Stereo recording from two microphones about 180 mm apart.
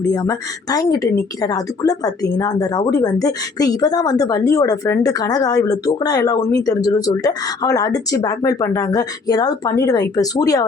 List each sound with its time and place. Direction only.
0.1 s speech: 20° left (ahead or behind)